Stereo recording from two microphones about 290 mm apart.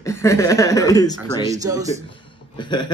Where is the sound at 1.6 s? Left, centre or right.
Centre.